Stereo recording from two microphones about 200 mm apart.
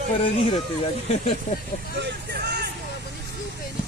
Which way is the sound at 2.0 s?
60° right (ahead or behind).